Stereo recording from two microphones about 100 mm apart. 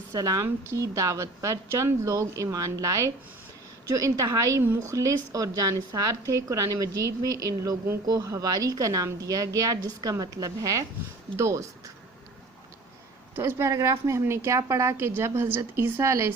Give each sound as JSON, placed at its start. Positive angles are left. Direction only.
{"t": 0.1, "sound": "a woman's voice", "side_deg": -35}
{"t": 13.3, "sound": "a woman's voice", "side_deg": -25}